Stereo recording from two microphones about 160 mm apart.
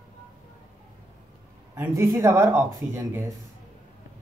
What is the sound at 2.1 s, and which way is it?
Speech, 20° right (ahead or behind).